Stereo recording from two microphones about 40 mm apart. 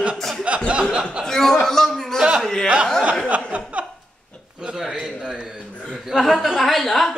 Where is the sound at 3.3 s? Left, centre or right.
Right.